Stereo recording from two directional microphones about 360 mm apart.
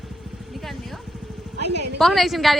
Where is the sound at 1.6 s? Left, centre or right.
Right.